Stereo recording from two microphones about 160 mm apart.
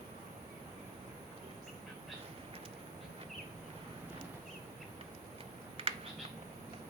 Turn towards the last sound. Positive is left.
turn(degrees=-35)  # may be behind; listen again after turning